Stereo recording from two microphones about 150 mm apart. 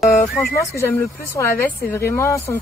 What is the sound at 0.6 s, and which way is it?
Speech, 15° left (ahead or behind).